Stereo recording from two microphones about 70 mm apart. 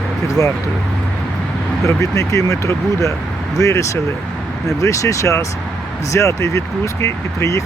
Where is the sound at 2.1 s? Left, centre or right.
Left.